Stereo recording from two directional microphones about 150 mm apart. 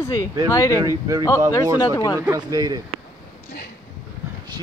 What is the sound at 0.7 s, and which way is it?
Speech, 20° right (ahead or behind).